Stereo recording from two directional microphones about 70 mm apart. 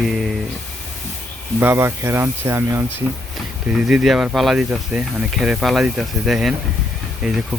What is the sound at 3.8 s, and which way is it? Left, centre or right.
Speech, centre.